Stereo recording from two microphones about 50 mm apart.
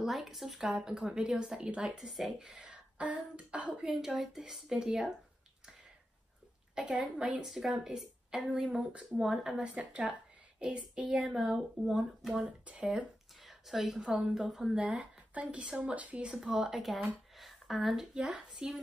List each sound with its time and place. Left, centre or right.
0.0 s speech: centre
2.3 s speech: centre
4.0 s speech: centre
6.7 s a woman's voice: right
7.4 s speech: centre
8.7 s a woman's voice: right
9.2 s a woman's voice: centre
11.2 s speech: centre
12.4 s a woman's voice: right
13.4 s a woman's voice: centre
14.8 s a woman's voice: right
16.3 s speech: centre
17.4 s a sound: centre
18.1 s a woman's voice: centre